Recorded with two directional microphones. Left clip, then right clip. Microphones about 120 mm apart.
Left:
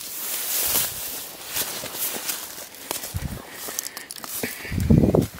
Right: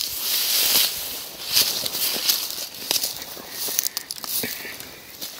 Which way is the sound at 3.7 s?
35° left (ahead or behind).